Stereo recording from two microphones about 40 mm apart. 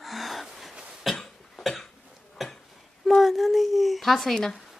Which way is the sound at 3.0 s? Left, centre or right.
Centre.